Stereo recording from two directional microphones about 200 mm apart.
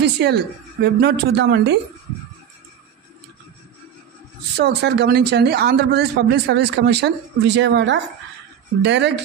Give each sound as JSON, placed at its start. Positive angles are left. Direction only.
{"t": 0.0, "sound": "speech", "side_deg": -55}
{"t": 4.6, "sound": "speech", "side_deg": -55}